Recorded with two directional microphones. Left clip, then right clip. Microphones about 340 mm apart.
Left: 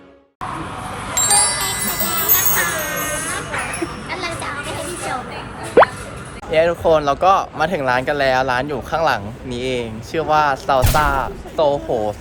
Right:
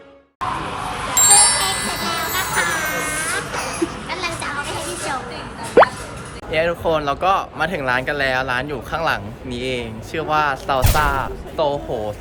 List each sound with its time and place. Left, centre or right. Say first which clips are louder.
1.4 s music: right 2 dB; centre
5.8 s plop: even; centre
6.5 s speech: left 4 dB; centre